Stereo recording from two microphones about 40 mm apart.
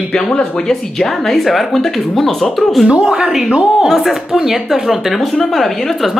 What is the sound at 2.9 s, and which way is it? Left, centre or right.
Speech, right.